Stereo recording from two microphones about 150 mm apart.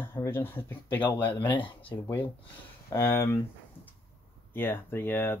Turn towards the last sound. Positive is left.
turn(degrees=15)  # may be behind; listen again after turning